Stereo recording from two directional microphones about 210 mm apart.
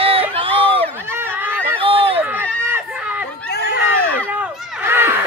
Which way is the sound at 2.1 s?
10° right (ahead or behind).